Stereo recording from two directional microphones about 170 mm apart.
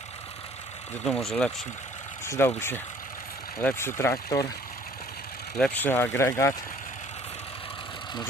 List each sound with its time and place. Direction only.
1.0 s speech: centre (ahead or behind)
2.2 s speech: 15° left (ahead or behind)
5.5 s speech: 5° left (ahead or behind)